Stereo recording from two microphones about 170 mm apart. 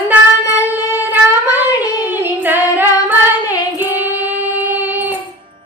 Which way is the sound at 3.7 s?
10° right (ahead or behind).